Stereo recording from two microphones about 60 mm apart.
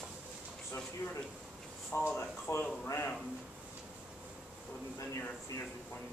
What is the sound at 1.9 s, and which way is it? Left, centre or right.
Speech, left.